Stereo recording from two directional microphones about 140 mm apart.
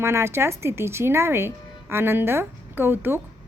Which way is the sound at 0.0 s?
20° right (ahead or behind).